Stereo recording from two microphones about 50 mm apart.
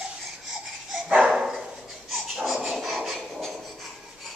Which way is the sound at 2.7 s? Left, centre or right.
Centre.